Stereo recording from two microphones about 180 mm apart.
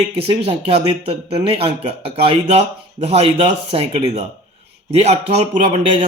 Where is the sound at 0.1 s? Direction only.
35° right (ahead or behind).